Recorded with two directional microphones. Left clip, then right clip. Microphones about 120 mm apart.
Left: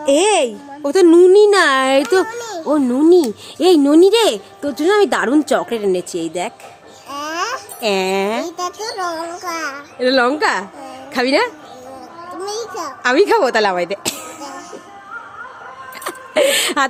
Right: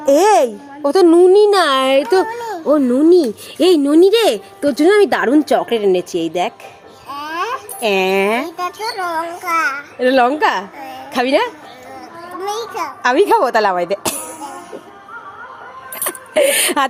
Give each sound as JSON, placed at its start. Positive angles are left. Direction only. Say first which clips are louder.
{"t": 0.0, "sound": "a child's voice", "louder": "right 3 dB", "side_deg": -10}
{"t": 3.6, "sound": "speech", "louder": "even", "side_deg": -25}
{"t": 4.9, "sound": "a woman's voice", "louder": "right 2 dB", "side_deg": -10}
{"t": 7.1, "sound": "music", "louder": "even", "side_deg": 45}
{"t": 7.8, "sound": "a child's voice", "louder": "right 2 dB", "side_deg": 0}
{"t": 8.2, "sound": "speech", "louder": "right 3 dB", "side_deg": -20}
{"t": 8.4, "sound": "a child's voice", "louder": "right 2 dB", "side_deg": 40}
{"t": 9.4, "sound": "a child's voice", "louder": "right 7 dB", "side_deg": 25}
{"t": 10.0, "sound": "a woman's voice", "louder": "right 2 dB", "side_deg": -15}
{"t": 12.4, "sound": "a child's voice", "louder": "right 3 dB", "side_deg": 20}
{"t": 13.0, "sound": "a woman's voice", "louder": "right 1 dB", "side_deg": -25}
{"t": 16.0, "sound": "speech", "louder": "right 1 dB", "side_deg": -15}